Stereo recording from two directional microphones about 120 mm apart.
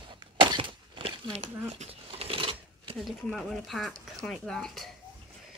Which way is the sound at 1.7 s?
55° right (ahead or behind).